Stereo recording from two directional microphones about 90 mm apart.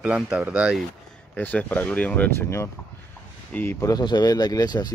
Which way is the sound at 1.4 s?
20° left (ahead or behind).